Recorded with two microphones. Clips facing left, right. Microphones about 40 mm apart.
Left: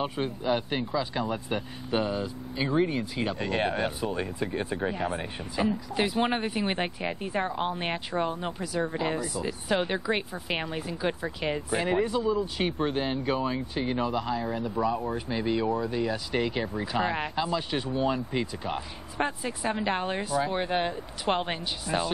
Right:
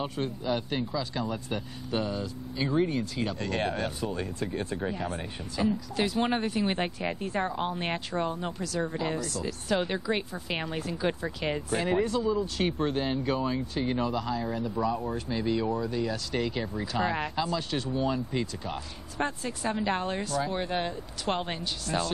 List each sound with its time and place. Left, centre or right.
0.0 s speech: centre